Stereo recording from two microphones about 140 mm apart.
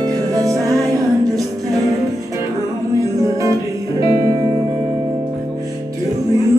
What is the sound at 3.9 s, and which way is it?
Music, 25° right (ahead or behind).